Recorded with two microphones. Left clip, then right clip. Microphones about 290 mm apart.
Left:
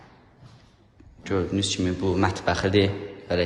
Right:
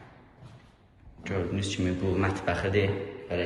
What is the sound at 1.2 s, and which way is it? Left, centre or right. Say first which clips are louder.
Speech: left 6 dB; centre.